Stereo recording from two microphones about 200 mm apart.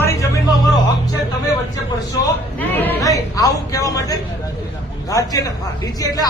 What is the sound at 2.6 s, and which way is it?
Speech, 10° left (ahead or behind).